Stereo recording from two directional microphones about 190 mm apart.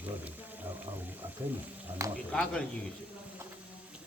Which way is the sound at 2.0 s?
15° right (ahead or behind).